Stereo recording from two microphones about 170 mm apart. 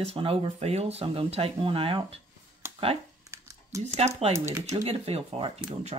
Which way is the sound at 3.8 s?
40° right (ahead or behind).